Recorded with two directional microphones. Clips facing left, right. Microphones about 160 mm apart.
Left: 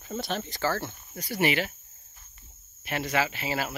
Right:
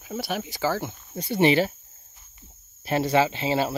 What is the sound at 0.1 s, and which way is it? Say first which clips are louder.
Speech: right 2 dB; 10° right (ahead or behind).